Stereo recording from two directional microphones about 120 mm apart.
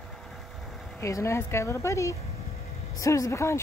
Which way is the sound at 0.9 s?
25° left (ahead or behind).